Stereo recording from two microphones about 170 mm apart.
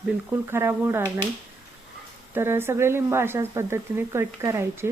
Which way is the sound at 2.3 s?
15° right (ahead or behind).